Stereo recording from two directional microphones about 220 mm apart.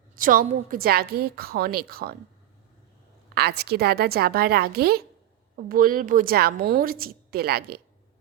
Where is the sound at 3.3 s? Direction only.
45° right (ahead or behind).